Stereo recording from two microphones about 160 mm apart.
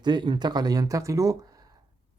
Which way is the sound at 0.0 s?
25° right (ahead or behind).